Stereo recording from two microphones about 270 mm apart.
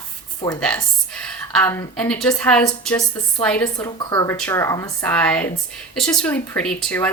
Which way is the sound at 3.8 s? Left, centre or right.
Centre.